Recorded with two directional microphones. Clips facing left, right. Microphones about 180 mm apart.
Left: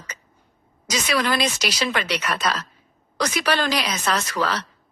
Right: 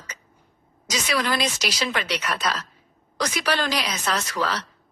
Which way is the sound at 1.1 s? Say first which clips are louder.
Left 2 dB; 65° left (ahead or behind).